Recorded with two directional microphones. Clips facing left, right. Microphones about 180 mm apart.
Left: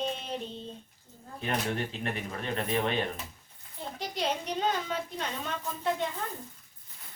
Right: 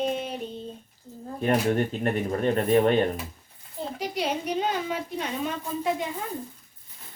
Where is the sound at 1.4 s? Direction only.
40° right (ahead or behind).